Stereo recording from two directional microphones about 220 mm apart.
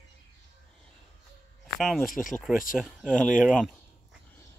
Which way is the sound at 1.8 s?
Centre (ahead or behind).